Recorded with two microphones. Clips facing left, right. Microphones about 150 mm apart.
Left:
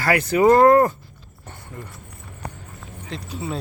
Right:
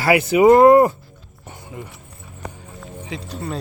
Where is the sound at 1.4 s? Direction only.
5° right (ahead or behind).